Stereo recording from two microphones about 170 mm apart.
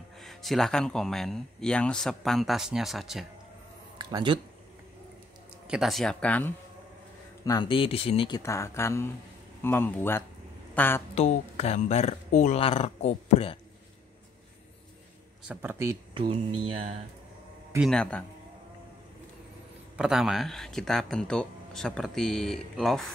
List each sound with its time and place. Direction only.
0.2 s speech: centre (ahead or behind)
4.0 s speech: 30° right (ahead or behind)
5.7 s speech: centre (ahead or behind)
7.4 s speech: 25° left (ahead or behind)
8.4 s speech: 15° left (ahead or behind)
10.7 s a sound: 10° left (ahead or behind)
11.1 s speech: 40° left (ahead or behind)
15.4 s speech: 10° right (ahead or behind)
16.2 s speech: 30° right (ahead or behind)
17.7 s speech: centre (ahead or behind)
20.0 s speech: centre (ahead or behind)